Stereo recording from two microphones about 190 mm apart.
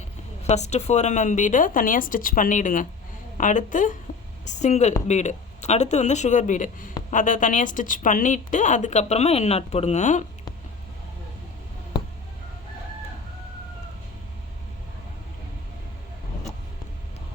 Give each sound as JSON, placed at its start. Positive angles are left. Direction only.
{"t": 0.4, "sound": "a woman's voice", "side_deg": 35}